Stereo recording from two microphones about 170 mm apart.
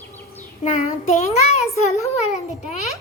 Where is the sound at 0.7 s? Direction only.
45° left (ahead or behind).